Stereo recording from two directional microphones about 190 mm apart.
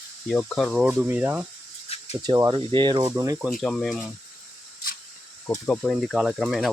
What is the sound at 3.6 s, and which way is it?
Speech, centre (ahead or behind).